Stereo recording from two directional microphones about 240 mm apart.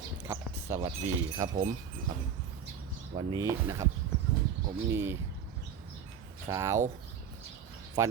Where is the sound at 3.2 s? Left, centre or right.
Centre.